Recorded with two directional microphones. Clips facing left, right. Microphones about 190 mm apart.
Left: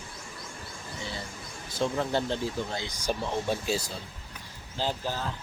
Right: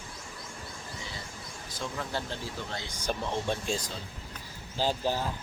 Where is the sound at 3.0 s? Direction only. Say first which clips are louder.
Left 2 dB; 10° left (ahead or behind).